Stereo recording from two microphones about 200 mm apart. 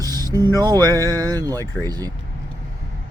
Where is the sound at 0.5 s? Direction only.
20° right (ahead or behind).